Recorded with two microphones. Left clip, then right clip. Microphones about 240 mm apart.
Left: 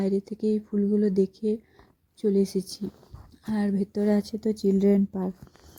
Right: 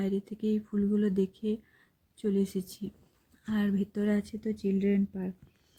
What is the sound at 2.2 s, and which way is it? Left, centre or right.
Speech, centre.